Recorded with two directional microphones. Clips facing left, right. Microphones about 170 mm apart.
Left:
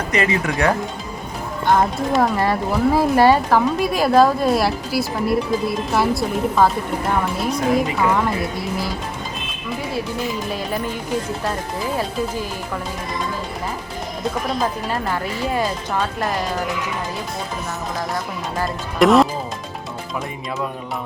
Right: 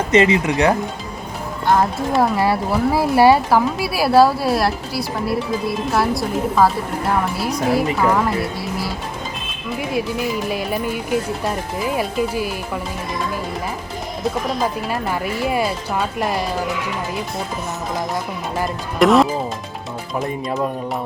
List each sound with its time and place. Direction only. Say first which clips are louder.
0.1 s speech: right 6 dB; 20° right (ahead or behind)
1.7 s speech: even; 5° right (ahead or behind)
7.9 s speech: right 1 dB; centre (ahead or behind)
10.5 s speech: right 2 dB; 10° right (ahead or behind)
14.6 s speech: right 1 dB; 10° right (ahead or behind)
18.9 s speech: even; centre (ahead or behind)